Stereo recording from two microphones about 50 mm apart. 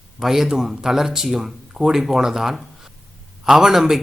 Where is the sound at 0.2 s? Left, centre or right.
Centre.